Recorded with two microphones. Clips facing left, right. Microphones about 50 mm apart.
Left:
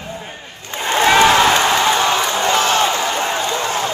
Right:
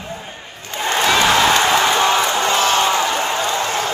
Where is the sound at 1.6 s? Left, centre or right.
Centre.